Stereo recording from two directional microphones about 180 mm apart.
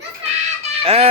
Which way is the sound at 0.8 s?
35° right (ahead or behind).